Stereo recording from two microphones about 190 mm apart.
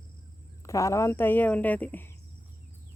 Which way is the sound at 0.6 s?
15° left (ahead or behind).